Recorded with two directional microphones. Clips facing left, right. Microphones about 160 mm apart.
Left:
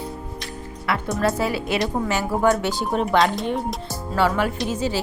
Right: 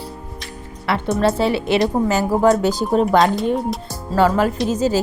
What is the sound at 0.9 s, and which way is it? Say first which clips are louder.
Speech: right 4 dB; 25° right (ahead or behind).